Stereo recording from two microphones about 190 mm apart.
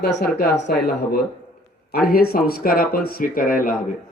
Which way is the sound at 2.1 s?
50° left (ahead or behind).